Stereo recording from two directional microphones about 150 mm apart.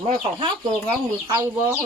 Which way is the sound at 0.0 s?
40° right (ahead or behind).